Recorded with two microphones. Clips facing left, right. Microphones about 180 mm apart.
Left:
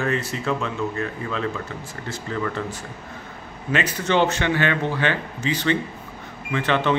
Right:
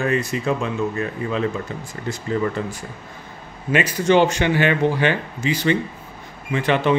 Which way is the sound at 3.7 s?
10° right (ahead or behind).